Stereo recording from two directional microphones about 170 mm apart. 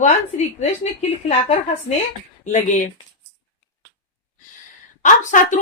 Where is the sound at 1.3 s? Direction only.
35° left (ahead or behind).